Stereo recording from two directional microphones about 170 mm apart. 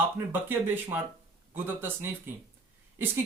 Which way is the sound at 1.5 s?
15° right (ahead or behind).